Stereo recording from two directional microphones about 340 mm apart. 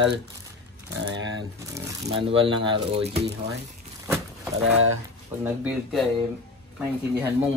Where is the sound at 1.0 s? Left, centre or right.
Right.